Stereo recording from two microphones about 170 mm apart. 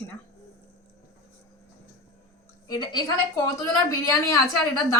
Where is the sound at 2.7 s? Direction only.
25° left (ahead or behind).